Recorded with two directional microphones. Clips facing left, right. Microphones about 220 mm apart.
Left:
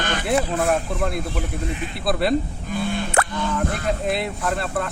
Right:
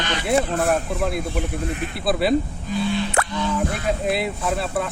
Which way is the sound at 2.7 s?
50° left (ahead or behind).